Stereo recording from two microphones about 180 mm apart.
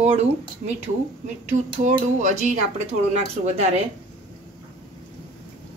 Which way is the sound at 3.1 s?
35° right (ahead or behind).